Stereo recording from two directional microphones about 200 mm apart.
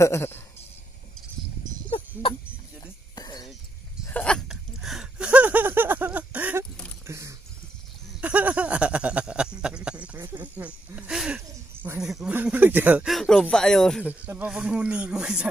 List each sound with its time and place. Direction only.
0.0 s speech: 10° left (ahead or behind)
1.9 s music: 25° left (ahead or behind)
4.0 s a sound: 5° left (ahead or behind)